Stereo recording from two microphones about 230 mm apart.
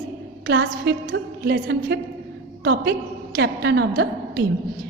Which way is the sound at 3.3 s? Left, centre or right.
Right.